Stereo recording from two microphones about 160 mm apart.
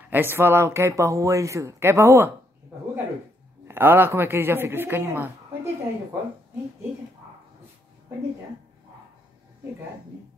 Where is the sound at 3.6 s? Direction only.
15° right (ahead or behind).